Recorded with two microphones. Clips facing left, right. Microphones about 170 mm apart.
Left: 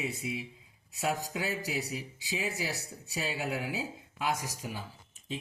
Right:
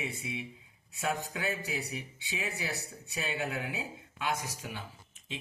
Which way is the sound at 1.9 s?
35° left (ahead or behind).